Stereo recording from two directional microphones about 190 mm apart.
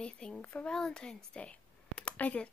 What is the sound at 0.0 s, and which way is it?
Speech, 5° left (ahead or behind).